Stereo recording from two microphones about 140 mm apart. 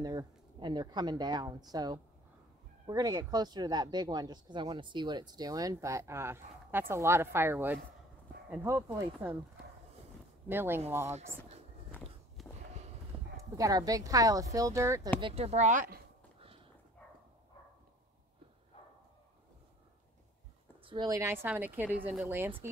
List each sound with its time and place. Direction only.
0.0 s speech: 30° right (ahead or behind)
10.5 s a woman's voice: 15° right (ahead or behind)
12.4 s a sound: centre (ahead or behind)
13.4 s speech: 25° right (ahead or behind)
15.1 s speech: 40° right (ahead or behind); by 16.0 s 65° right (ahead or behind)
20.8 s a woman's voice: 35° right (ahead or behind)
21.2 s a woman's voice: 15° right (ahead or behind)